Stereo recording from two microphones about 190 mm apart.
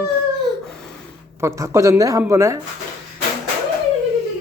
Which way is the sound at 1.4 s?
15° right (ahead or behind).